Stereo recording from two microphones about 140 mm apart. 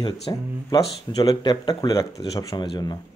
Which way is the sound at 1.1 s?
35° left (ahead or behind).